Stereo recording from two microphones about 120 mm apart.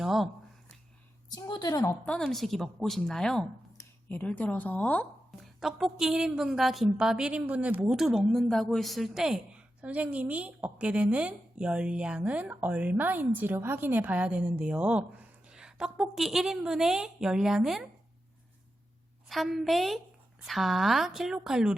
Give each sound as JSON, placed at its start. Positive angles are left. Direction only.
{"t": 0.0, "sound": "a sound", "side_deg": 0}
{"t": 1.3, "sound": "a woman's voice", "side_deg": 35}
{"t": 1.9, "sound": "a woman's voice", "side_deg": 10}
{"t": 5.4, "sound": "a woman's voice", "side_deg": 0}
{"t": 19.3, "sound": "a woman's voice", "side_deg": 0}